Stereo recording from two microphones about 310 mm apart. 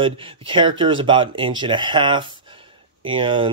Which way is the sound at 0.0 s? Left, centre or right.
Centre.